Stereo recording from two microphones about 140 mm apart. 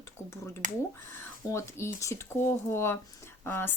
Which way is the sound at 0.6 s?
60° right (ahead or behind).